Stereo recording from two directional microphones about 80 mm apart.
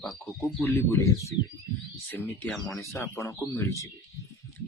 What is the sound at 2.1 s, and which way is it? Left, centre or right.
Speech, left.